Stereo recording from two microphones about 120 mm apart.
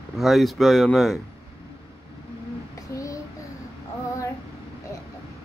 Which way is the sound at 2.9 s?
25° left (ahead or behind).